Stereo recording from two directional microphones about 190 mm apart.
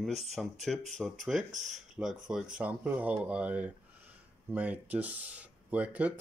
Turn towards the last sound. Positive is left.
turn(degrees=-10)  # may be behind; listen again after turning